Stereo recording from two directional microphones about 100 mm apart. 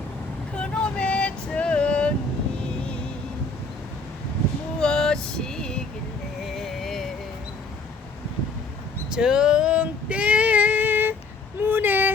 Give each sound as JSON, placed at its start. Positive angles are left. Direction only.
{"t": 0.5, "sound": "vehicle", "side_deg": 10}
{"t": 4.8, "sound": "vehicle", "side_deg": 5}
{"t": 6.4, "sound": "music", "side_deg": 0}
{"t": 9.1, "sound": "female singing", "side_deg": -10}
{"t": 11.6, "sound": "vehicle", "side_deg": -20}